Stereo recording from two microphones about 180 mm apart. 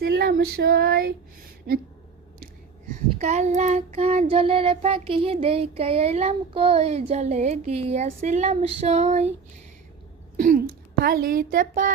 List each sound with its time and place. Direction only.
0.0 s child singing: 60° right (ahead or behind)
3.2 s child singing: 40° right (ahead or behind)
10.3 s a woman's voice: 50° right (ahead or behind)